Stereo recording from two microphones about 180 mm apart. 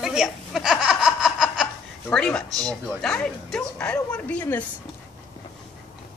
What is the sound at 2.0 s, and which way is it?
Speech, 5° left (ahead or behind).